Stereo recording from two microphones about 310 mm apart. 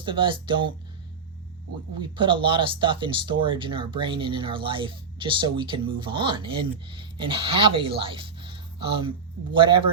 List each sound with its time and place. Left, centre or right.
0.0 s speech: centre
2.0 s speech: centre